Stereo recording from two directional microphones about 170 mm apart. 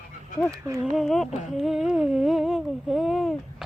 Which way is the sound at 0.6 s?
15° right (ahead or behind).